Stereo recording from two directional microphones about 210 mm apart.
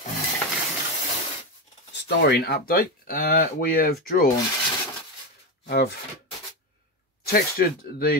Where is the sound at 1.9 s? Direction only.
55° left (ahead or behind).